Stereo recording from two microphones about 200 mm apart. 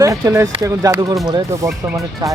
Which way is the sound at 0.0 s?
15° right (ahead or behind).